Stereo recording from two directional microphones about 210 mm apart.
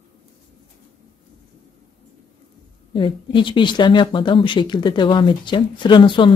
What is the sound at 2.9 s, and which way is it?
Speech, 25° left (ahead or behind).